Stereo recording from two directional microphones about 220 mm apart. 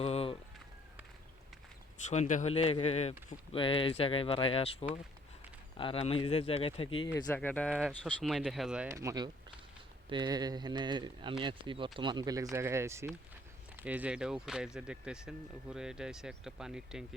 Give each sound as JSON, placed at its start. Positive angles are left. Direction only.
{"t": 0.0, "sound": "a sound", "side_deg": 25}
{"t": 2.0, "sound": "speech", "side_deg": 35}
{"t": 7.3, "sound": "speech", "side_deg": 5}